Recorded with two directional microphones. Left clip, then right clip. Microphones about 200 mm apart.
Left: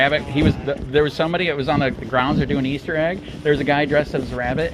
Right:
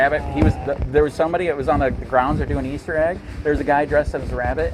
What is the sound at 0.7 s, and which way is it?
Speech, 30° right (ahead or behind).